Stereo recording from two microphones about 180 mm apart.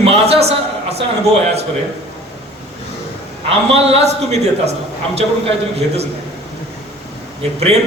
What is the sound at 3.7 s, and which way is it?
Speech, 35° right (ahead or behind).